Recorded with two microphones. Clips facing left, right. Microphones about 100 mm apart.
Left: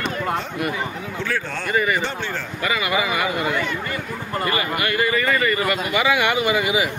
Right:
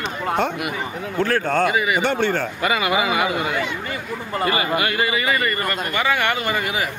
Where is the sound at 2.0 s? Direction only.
65° right (ahead or behind).